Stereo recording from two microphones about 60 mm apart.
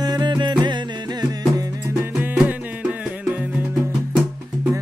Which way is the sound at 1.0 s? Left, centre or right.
Right.